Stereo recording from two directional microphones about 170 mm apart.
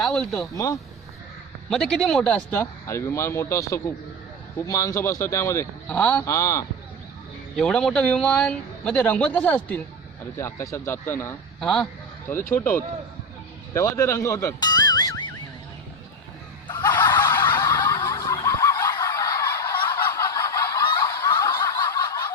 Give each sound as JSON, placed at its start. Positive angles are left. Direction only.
{"t": 0.0, "sound": "speech", "side_deg": 0}
{"t": 0.4, "sound": "a man's voice", "side_deg": 20}
{"t": 1.7, "sound": "a man's voice", "side_deg": 5}
{"t": 7.5, "sound": "a man's voice", "side_deg": 5}
{"t": 16.6, "sound": "snicker", "side_deg": 25}
{"t": 17.0, "sound": "a sound", "side_deg": 25}
{"t": 17.4, "sound": "snicker", "side_deg": 20}